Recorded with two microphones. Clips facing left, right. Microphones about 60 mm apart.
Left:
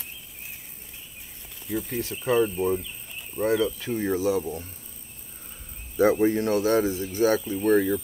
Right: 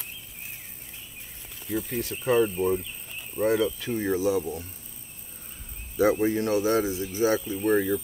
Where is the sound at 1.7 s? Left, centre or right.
Centre.